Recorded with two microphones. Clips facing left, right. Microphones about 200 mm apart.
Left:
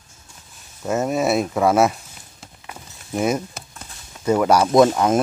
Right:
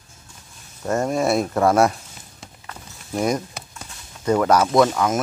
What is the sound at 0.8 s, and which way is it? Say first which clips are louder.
Speech: even; 5° left (ahead or behind).